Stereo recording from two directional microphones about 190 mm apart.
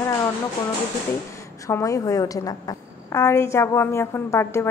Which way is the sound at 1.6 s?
15° left (ahead or behind).